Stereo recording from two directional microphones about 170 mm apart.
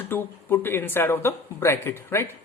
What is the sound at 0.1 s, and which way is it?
Speech, 15° left (ahead or behind).